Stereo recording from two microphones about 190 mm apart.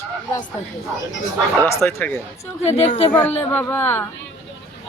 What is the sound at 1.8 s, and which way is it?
Speech, 10° left (ahead or behind).